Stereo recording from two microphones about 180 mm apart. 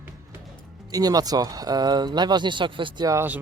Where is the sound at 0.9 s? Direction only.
20° right (ahead or behind).